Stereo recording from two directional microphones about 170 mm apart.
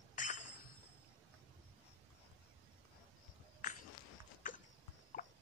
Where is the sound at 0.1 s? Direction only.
45° left (ahead or behind).